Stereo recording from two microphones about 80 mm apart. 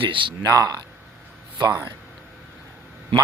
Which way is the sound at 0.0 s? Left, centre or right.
Right.